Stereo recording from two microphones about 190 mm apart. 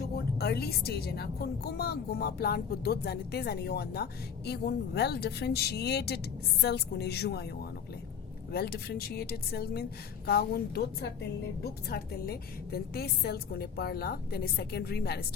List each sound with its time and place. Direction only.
0.3 s speech: 55° left (ahead or behind)
8.5 s speech: 55° left (ahead or behind)